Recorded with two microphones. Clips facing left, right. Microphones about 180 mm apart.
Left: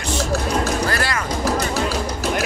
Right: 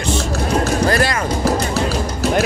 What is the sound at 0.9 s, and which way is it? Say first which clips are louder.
Music: right 6 dB; 20° right (ahead or behind).